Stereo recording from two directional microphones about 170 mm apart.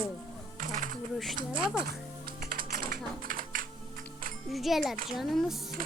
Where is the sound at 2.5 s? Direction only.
55° right (ahead or behind).